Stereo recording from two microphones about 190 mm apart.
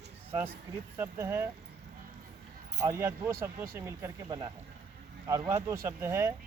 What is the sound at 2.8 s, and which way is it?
Speech, 15° right (ahead or behind).